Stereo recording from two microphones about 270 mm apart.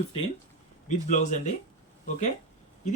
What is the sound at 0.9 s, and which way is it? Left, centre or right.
Speech, left.